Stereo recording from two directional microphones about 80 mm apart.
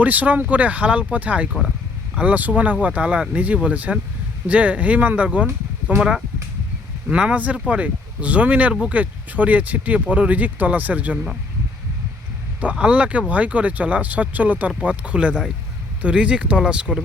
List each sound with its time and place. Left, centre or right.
0.0 s speech: centre
12.7 s speech: centre